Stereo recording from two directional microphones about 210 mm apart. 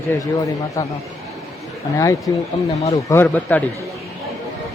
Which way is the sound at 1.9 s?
15° left (ahead or behind).